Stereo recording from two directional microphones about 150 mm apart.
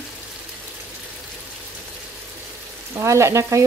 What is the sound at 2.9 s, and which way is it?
Speech, 20° right (ahead or behind).